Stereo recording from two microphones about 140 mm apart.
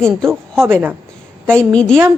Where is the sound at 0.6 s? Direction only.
15° right (ahead or behind).